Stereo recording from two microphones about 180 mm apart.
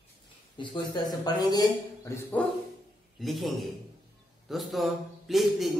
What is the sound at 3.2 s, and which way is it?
A man's voice, centre (ahead or behind).